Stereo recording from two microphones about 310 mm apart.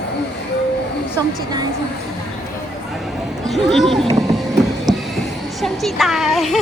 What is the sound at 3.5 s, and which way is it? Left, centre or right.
Speech, centre.